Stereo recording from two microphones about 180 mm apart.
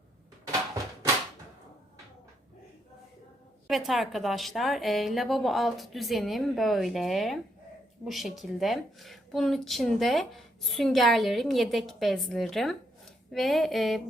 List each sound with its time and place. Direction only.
3.7 s a woman's voice: centre (ahead or behind)